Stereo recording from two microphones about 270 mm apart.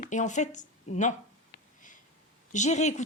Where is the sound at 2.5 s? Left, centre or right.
Left.